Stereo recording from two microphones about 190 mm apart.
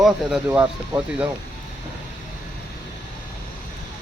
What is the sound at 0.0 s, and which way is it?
Speech, 5° right (ahead or behind).